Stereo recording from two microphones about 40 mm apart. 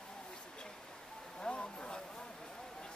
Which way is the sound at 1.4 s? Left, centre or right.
Left.